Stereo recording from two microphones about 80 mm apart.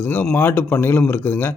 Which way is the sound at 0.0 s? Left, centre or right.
Left.